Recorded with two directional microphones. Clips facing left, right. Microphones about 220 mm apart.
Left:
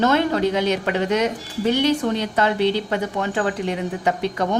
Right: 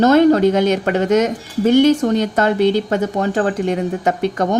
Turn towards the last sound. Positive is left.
turn(degrees=-45)  # may be behind; listen again after turning